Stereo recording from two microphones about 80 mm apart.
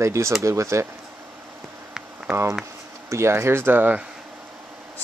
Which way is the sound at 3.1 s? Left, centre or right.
Right.